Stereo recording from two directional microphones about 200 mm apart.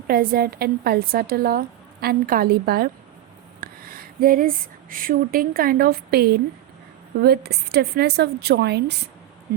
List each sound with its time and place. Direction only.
0.1 s a woman's voice: 45° right (ahead or behind)